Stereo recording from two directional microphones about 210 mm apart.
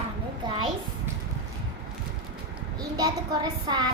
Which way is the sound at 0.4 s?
25° right (ahead or behind).